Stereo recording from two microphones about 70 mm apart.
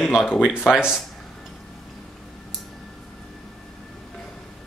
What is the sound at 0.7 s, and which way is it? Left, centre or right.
Speech, centre.